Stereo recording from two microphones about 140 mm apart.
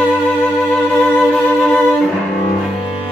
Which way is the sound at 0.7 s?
10° left (ahead or behind).